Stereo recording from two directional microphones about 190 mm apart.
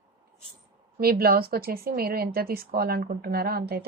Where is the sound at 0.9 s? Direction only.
55° right (ahead or behind).